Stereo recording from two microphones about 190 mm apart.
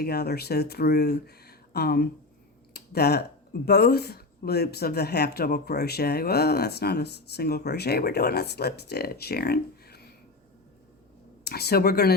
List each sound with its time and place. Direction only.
0.0 s speech: 55° left (ahead or behind)
2.7 s a sound: 55° left (ahead or behind)
3.7 s speech: 55° left (ahead or behind)
11.4 s speech: 55° left (ahead or behind)